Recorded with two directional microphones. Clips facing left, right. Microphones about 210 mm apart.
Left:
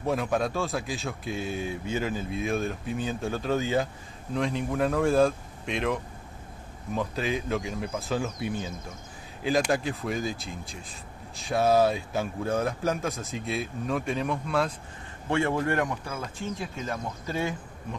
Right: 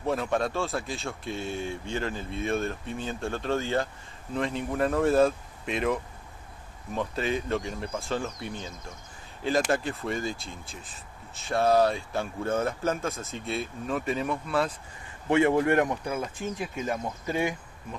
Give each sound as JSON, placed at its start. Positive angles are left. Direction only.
{"t": 0.0, "sound": "speech", "side_deg": 0}
{"t": 15.2, "sound": "speech", "side_deg": -15}